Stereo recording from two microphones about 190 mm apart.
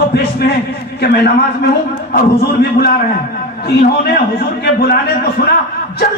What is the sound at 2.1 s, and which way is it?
A man's voice, 55° left (ahead or behind).